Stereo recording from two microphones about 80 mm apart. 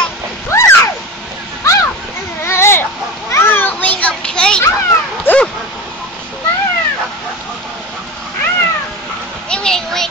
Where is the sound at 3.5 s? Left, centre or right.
Left.